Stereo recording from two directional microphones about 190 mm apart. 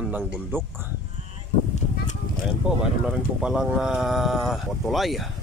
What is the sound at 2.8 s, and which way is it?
Speech, 5° right (ahead or behind).